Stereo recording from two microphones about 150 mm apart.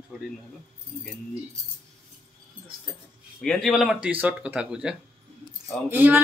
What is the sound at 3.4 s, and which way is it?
A man's voice, 5° left (ahead or behind).